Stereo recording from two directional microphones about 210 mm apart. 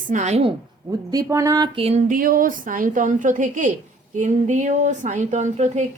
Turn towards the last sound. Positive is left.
turn(degrees=-35)  # may be behind; listen again after turning